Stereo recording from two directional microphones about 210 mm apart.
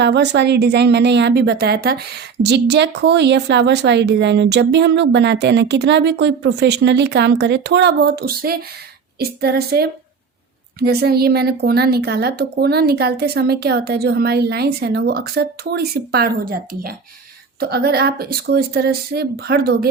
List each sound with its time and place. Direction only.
0.0 s a woman's voice: 55° right (ahead or behind)